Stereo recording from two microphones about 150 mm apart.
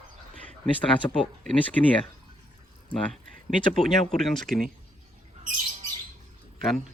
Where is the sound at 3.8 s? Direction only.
5° left (ahead or behind).